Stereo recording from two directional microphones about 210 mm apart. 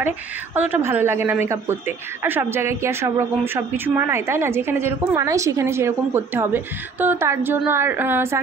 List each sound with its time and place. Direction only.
0.6 s a woman's voice: 10° right (ahead or behind)